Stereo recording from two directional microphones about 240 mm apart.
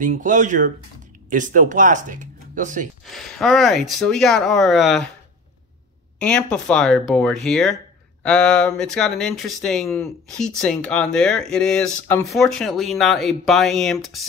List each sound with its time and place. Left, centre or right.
0.0 s speech: right
3.1 s speech: centre
6.1 s speech: centre